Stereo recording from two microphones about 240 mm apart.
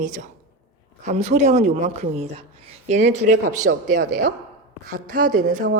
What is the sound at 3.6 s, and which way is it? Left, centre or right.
Speech, right.